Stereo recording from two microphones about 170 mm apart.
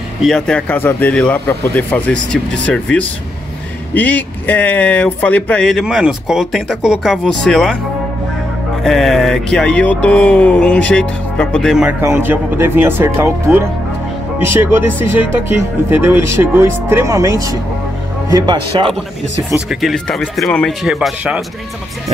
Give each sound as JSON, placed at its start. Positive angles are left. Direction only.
{"t": 0.2, "sound": "a man's voice", "side_deg": 5}
{"t": 8.8, "sound": "speech", "side_deg": 0}
{"t": 12.0, "sound": "speech", "side_deg": -15}
{"t": 19.7, "sound": "speech", "side_deg": 0}